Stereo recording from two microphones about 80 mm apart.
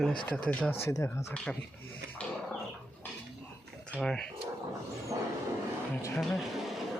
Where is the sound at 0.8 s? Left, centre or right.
Left.